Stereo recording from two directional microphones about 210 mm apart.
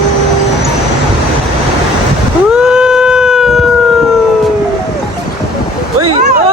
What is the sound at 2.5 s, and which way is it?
Cat, 5° right (ahead or behind).